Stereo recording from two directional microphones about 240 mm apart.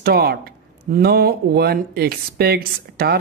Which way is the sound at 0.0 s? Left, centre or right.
Right.